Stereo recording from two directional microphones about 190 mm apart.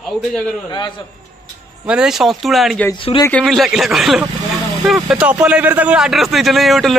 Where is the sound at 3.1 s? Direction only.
30° left (ahead or behind).